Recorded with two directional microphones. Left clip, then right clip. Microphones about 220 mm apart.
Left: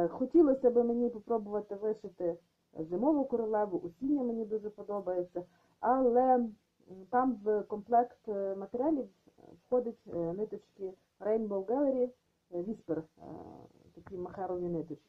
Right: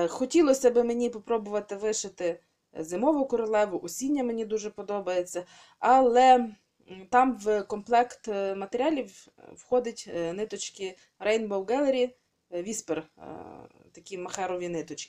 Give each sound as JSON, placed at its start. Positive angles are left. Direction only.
{"t": 0.0, "sound": "speech", "side_deg": -35}